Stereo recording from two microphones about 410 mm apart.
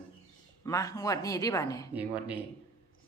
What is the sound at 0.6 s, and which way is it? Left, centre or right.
Speech, centre.